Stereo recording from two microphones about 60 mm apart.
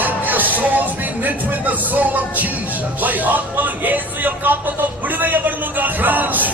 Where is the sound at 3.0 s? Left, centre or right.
Right.